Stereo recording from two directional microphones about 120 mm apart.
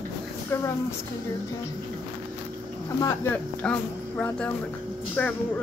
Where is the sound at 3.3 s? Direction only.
10° left (ahead or behind).